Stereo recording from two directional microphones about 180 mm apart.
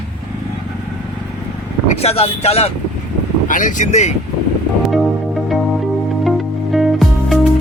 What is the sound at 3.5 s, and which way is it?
Speech, 45° left (ahead or behind).